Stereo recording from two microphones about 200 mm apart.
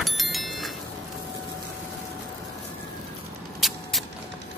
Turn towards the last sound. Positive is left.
turn(degrees=0)  # may be behind; listen again after turning